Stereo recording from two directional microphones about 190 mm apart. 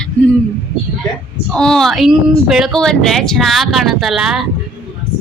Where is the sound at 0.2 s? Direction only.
5° left (ahead or behind).